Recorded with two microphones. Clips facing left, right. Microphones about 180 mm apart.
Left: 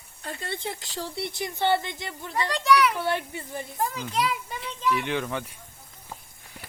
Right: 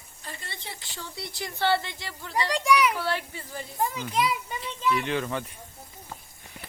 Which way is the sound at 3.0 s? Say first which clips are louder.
Left 2 dB; 20° left (ahead or behind).